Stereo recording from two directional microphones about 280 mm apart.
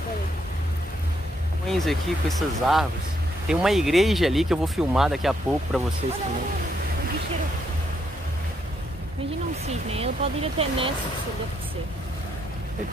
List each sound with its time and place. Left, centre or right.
1.7 s speech: centre
9.7 s speech: right